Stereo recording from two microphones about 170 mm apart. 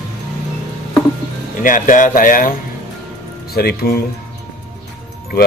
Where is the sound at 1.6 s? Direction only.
50° left (ahead or behind).